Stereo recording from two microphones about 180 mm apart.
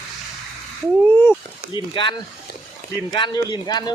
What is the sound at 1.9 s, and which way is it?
Speech, 25° left (ahead or behind).